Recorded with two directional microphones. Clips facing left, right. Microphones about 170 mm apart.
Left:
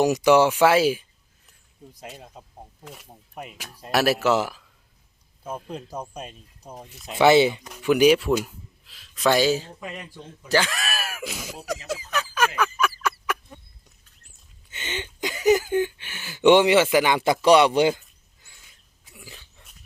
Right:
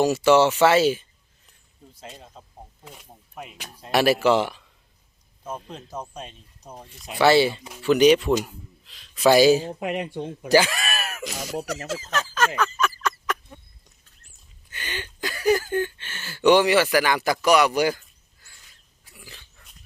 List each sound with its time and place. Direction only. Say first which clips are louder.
0.0 s speech: even; 15° left (ahead or behind)
2.0 s speech: left 1 dB; 5° left (ahead or behind)
7.2 s speech: left 1 dB; 20° left (ahead or behind); by 9.7 s 15° right (ahead or behind)
9.8 s speech: right 10 dB; 70° right (ahead or behind)
10.5 s speech: right 4 dB; 5° right (ahead or behind)
11.9 s a sound: even; 15° left (ahead or behind)
14.7 s speech: left 2 dB; 20° left (ahead or behind)
19.0 s dog: left 2 dB; 20° left (ahead or behind)